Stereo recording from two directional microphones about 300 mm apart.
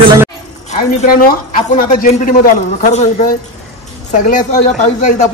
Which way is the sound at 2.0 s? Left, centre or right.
Left.